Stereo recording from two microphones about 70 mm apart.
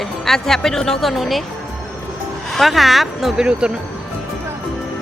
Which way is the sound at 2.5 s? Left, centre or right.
Centre.